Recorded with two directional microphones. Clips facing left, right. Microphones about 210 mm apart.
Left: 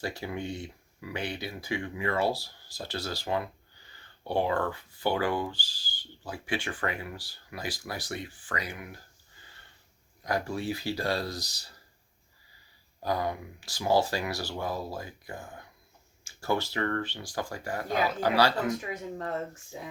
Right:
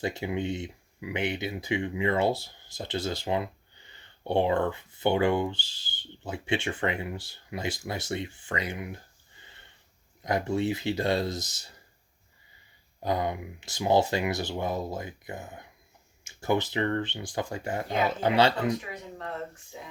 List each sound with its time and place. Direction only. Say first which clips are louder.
0.0 s speech: right 4 dB; 20° right (ahead or behind)
9.4 s sniff: right 2 dB; 20° right (ahead or behind)
10.2 s speech: right 4 dB; 20° right (ahead or behind)
13.0 s speech: right 2 dB; 20° right (ahead or behind)